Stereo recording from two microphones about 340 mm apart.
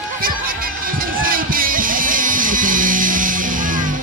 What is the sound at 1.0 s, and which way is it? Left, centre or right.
Music, right.